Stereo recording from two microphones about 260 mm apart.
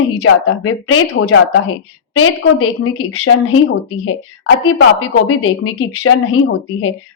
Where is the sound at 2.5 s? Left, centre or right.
Left.